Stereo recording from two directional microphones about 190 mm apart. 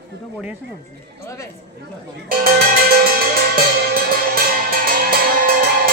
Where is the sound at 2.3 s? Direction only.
50° right (ahead or behind).